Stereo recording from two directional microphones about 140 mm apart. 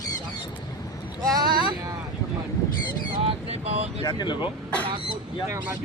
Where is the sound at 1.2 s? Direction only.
30° right (ahead or behind).